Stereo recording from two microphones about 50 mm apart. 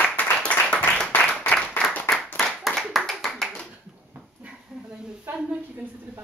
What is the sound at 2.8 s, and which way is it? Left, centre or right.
Clapping, centre.